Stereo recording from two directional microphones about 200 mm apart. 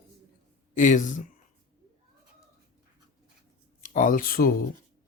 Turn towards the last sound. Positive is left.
turn(degrees=45)  # may be behind; listen again after turning